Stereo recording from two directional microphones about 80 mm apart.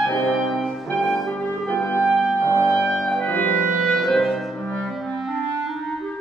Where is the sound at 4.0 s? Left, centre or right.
Centre.